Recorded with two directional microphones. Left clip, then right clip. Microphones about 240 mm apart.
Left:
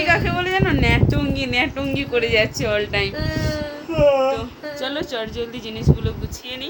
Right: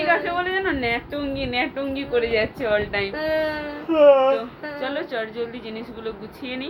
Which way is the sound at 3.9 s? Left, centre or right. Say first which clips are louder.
Right 2 dB; right.